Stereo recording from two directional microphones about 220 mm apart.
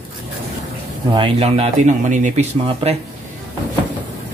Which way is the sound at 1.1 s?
25° right (ahead or behind).